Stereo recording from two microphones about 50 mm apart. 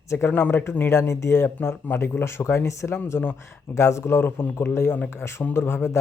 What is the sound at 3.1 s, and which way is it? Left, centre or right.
Speech, left.